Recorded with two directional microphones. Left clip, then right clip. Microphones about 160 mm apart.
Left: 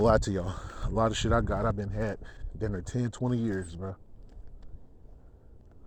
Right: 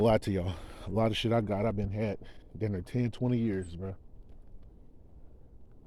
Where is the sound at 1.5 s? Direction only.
35° right (ahead or behind).